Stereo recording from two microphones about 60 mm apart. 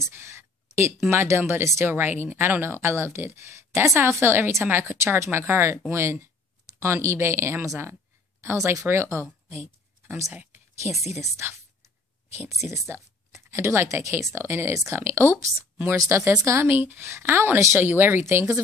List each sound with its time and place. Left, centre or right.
0.1 s a sound: right
1.1 s speech: right
4.9 s speech: right
9.5 s a sound: right
10.3 s speech: right
12.3 s speech: right
14.7 s speech: right
15.0 s speech: right
18.2 s speech: right